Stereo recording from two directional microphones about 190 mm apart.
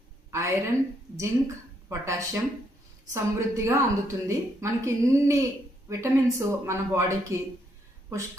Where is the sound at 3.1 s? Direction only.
15° right (ahead or behind).